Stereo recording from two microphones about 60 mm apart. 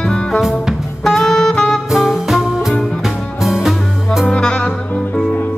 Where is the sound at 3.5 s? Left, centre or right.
Centre.